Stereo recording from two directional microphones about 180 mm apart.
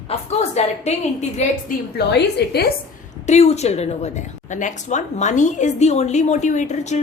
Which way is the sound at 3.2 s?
40° left (ahead or behind).